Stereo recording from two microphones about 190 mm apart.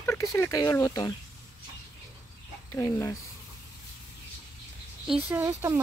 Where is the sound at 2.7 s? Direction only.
15° left (ahead or behind).